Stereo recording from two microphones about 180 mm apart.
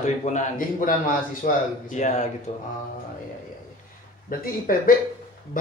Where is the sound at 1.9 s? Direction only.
40° left (ahead or behind).